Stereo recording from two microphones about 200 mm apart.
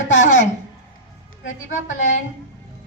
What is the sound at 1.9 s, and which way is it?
Speech, 40° left (ahead or behind).